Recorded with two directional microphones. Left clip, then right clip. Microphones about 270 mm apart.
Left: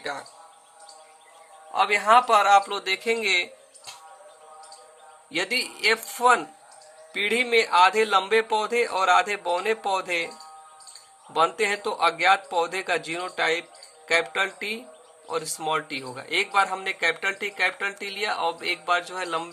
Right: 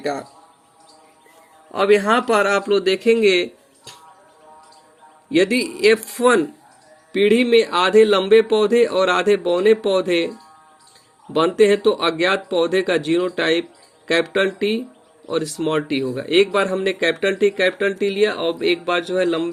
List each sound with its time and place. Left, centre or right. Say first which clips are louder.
0.0 s speech: right 8 dB; centre
1.7 s speech: right 3 dB; centre
5.3 s speech: right 8 dB; centre
11.3 s speech: right 7 dB; centre